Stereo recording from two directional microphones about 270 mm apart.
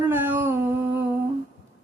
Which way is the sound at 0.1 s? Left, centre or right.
Centre.